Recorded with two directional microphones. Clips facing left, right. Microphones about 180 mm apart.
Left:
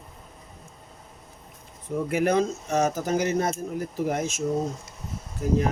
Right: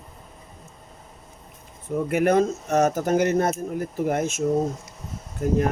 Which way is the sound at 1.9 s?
55° right (ahead or behind).